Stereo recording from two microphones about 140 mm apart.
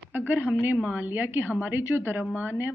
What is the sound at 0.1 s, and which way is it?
A woman's voice, 15° right (ahead or behind).